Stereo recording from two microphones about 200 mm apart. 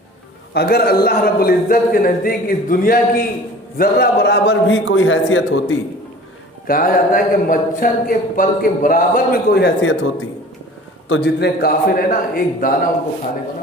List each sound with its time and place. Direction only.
0.5 s a man's voice: 50° left (ahead or behind); by 5.7 s 80° left
6.7 s speech: 45° left (ahead or behind); by 10.1 s 65° left (ahead or behind)
11.1 s speech: 55° left (ahead or behind)